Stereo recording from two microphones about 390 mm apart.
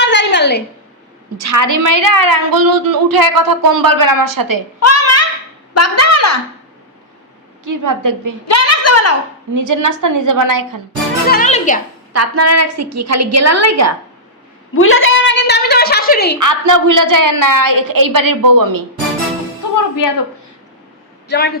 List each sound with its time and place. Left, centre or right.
0.0 s a sound: left
1.4 s a woman's voice: right
4.8 s a sound: left
5.7 s a woman's voice: left
7.6 s a woman's voice: right
8.4 s a woman's voice: left
9.6 s a woman's voice: right
11.3 s a child's voice: centre
12.1 s a woman's voice: right
14.8 s a sound: left
16.4 s a woman's voice: right
21.2 s a man's voice: left